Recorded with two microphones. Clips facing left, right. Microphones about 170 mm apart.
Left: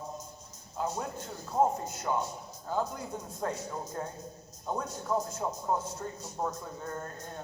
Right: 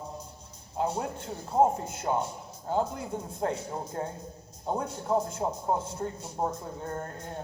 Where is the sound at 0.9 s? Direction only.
30° right (ahead or behind).